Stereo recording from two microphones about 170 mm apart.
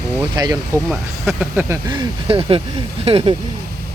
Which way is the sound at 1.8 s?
30° right (ahead or behind).